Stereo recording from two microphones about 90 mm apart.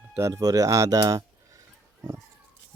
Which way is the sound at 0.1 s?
35° right (ahead or behind).